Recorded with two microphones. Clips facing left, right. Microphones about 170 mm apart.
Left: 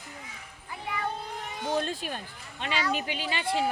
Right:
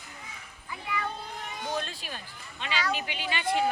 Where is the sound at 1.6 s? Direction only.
25° left (ahead or behind).